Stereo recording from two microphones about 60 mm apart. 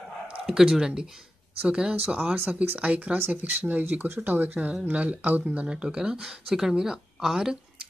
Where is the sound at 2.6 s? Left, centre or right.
Right.